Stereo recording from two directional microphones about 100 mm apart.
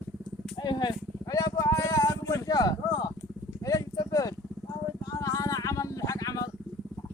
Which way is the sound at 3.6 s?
35° left (ahead or behind).